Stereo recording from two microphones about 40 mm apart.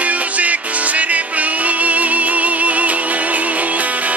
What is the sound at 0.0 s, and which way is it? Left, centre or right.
Music, right.